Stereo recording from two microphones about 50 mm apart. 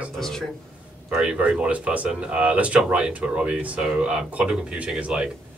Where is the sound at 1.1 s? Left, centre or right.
Right.